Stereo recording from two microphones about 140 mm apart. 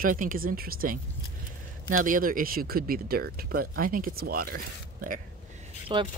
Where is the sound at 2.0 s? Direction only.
80° right.